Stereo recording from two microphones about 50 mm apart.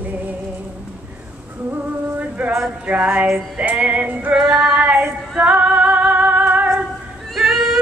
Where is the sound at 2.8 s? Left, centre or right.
Right.